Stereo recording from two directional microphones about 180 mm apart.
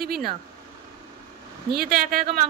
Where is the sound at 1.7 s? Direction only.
55° right (ahead or behind).